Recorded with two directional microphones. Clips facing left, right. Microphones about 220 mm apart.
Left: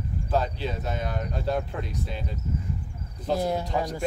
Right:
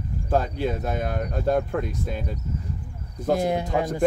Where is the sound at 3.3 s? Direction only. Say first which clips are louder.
Right 3 dB; 20° right (ahead or behind).